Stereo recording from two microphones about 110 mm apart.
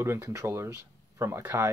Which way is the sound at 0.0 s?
25° right (ahead or behind).